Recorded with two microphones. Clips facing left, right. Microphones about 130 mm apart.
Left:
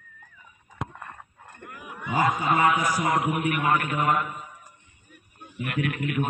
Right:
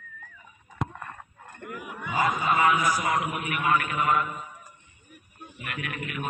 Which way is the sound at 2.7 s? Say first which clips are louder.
Left 1 dB; 30° left (ahead or behind).